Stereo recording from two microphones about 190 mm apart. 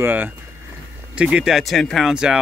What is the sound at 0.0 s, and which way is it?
Speech, 10° right (ahead or behind).